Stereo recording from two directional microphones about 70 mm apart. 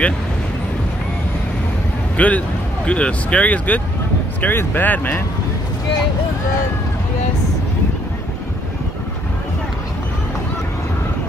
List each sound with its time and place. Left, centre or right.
2.1 s speech: centre